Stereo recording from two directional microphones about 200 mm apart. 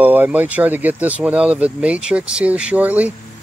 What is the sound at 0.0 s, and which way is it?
Speech, 10° right (ahead or behind).